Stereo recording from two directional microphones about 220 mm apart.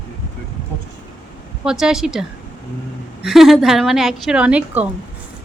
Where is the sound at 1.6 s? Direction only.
5° right (ahead or behind).